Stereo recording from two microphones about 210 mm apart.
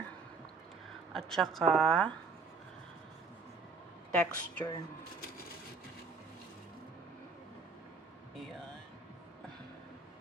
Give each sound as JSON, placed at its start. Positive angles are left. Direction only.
{"t": 1.1, "sound": "a woman's voice", "side_deg": 0}
{"t": 4.1, "sound": "a woman's voice", "side_deg": 5}